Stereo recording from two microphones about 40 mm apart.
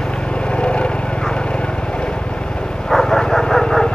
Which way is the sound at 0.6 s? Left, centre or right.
Left.